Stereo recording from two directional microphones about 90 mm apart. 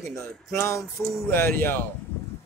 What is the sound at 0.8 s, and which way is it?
Speech, centre (ahead or behind).